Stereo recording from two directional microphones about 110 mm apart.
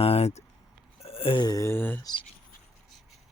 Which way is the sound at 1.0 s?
60° left (ahead or behind).